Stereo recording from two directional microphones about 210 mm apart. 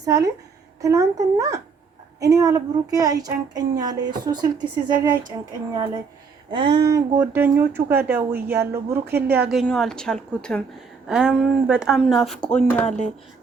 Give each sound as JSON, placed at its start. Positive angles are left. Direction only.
{"t": 0.0, "sound": "a woman's voice", "side_deg": -15}